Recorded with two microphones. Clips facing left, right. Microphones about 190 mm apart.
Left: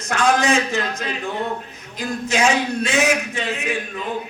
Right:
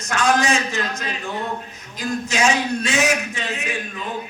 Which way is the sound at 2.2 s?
55° left (ahead or behind).